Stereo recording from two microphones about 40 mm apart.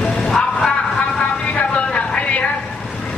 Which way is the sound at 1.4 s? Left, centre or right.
Left.